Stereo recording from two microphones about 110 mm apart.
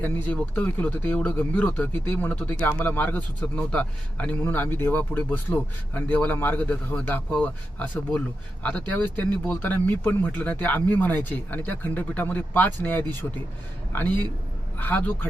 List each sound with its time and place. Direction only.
0.0 s speech: 15° left (ahead or behind)